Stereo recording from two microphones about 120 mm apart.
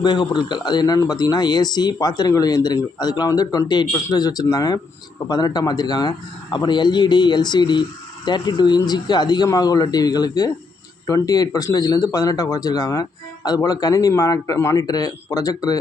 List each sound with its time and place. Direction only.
0.0 s speech: 35° left (ahead or behind)